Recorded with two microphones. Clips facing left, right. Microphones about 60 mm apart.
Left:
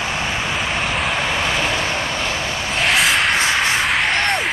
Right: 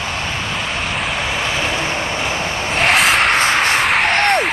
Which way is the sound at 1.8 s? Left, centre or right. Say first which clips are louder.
Right 1 dB; centre.